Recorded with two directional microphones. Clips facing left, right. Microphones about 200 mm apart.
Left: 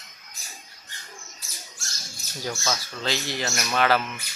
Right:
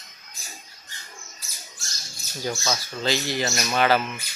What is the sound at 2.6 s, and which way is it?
Speech, centre (ahead or behind).